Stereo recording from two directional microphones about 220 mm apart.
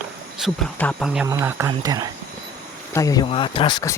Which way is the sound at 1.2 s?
10° right (ahead or behind).